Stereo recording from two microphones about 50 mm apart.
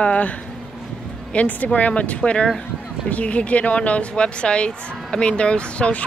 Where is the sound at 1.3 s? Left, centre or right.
Left.